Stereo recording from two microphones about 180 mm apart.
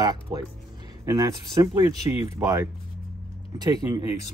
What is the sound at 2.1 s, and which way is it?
Speech, 35° left (ahead or behind).